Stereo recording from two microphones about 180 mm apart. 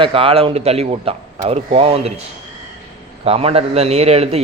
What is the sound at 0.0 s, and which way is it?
A man's voice, 30° right (ahead or behind).